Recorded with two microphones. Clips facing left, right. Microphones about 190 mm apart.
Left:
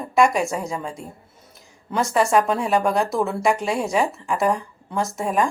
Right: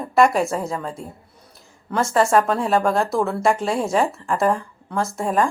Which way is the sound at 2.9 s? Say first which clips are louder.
Right 1 dB; centre (ahead or behind).